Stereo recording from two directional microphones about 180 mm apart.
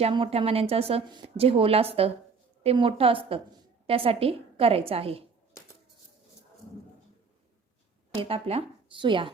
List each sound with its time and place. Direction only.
0.0 s speech: 30° right (ahead or behind)
8.1 s speech: 30° right (ahead or behind)